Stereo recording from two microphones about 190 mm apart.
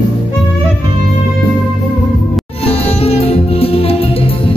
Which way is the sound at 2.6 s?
35° left (ahead or behind).